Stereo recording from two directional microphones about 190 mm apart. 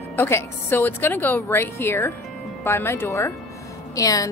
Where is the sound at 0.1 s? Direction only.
15° left (ahead or behind).